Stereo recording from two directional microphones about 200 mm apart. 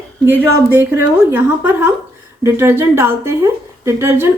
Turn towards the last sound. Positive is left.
turn(degrees=-10)  # may be behind; listen again after turning